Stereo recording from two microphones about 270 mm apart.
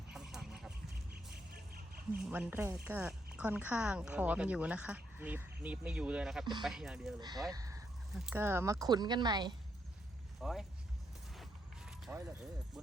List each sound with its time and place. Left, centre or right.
0.1 s duck: centre
1.5 s a sound: right
2.3 s speech: centre
6.4 s speech: centre
6.7 s speech: centre
7.2 s speech: centre
7.5 s a sound: centre
8.1 s speech: centre
10.4 s speech: centre
11.3 s a sound: centre